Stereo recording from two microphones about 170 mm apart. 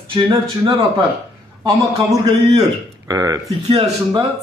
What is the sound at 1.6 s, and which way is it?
A man's voice, 25° right (ahead or behind).